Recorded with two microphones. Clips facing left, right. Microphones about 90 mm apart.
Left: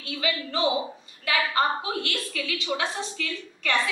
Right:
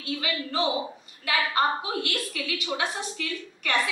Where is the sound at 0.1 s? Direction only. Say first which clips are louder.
Left 1 dB; 35° right (ahead or behind).